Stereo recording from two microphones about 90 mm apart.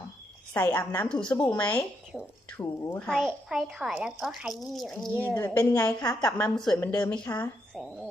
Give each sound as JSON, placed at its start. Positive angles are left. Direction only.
{"t": 0.5, "sound": "a woman's voice", "side_deg": 20}
{"t": 2.1, "sound": "a woman's voice", "side_deg": 0}
{"t": 2.5, "sound": "speech", "side_deg": 20}
{"t": 3.1, "sound": "a woman's voice", "side_deg": 0}
{"t": 5.3, "sound": "speech", "side_deg": 30}
{"t": 5.8, "sound": "a woman's voice", "side_deg": 15}